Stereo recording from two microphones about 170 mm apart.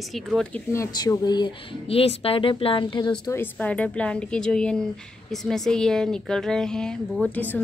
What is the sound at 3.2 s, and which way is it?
A woman's voice, 15° left (ahead or behind).